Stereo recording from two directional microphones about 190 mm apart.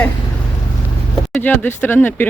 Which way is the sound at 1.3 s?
10° left (ahead or behind).